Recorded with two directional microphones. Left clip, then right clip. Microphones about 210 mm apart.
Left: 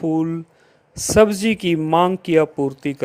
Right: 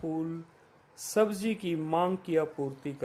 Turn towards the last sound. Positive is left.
turn(degrees=35)  # may be behind; listen again after turning